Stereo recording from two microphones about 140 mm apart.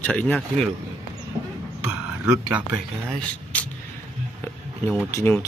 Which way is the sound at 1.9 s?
10° right (ahead or behind).